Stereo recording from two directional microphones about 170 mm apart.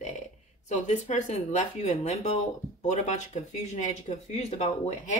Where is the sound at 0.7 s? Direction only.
40° left (ahead or behind).